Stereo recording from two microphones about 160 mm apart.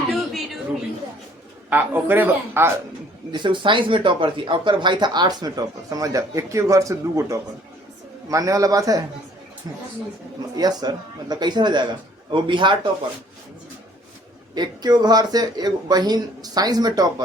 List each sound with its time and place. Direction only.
0.1 s a sound: centre (ahead or behind)
1.7 s a man's voice: 10° right (ahead or behind)
3.3 s speech: 30° right (ahead or behind)
14.5 s speech: 25° right (ahead or behind)